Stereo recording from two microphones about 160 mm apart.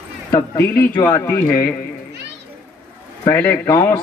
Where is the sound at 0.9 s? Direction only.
20° left (ahead or behind).